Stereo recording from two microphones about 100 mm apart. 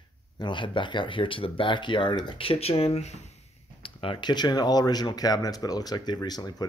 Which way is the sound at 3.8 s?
60° left (ahead or behind).